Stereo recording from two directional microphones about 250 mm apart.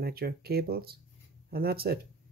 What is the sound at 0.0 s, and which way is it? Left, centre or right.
Speech, right.